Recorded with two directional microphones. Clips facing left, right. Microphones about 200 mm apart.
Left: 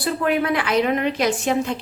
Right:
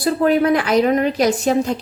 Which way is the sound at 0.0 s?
40° right (ahead or behind).